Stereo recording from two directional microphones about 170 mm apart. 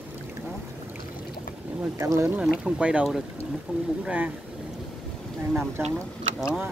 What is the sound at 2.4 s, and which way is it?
Speech, 5° right (ahead or behind).